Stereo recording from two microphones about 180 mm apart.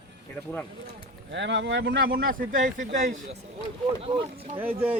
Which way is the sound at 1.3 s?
80° right.